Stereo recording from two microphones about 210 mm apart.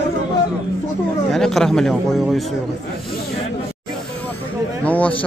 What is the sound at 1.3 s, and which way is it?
A man's voice, centre (ahead or behind).